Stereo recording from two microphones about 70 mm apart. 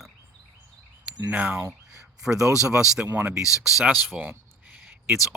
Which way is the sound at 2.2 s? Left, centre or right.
Centre.